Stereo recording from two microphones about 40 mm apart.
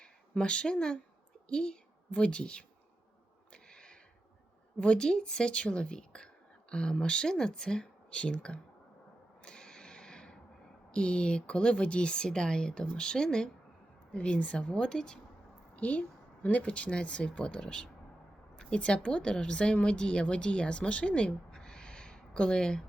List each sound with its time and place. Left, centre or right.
0.0 s a woman's voice: left
2.0 s a woman's voice: left
3.5 s a sound: left
4.8 s a woman's voice: left
9.4 s a sound: left
10.9 s a woman's voice: left
14.1 s a woman's voice: left
15.7 s a sound: left
16.6 s a woman's voice: left